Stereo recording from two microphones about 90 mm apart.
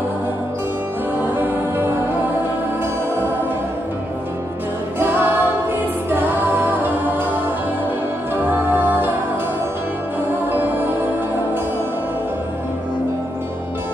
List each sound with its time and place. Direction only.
1.3 s music: 20° right (ahead or behind)
4.9 s music: 20° right (ahead or behind)
8.5 s music: 20° right (ahead or behind)
10.5 s music: 20° right (ahead or behind)